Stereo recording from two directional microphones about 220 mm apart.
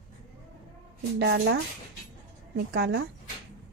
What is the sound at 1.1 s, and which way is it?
Speech, 50° right (ahead or behind).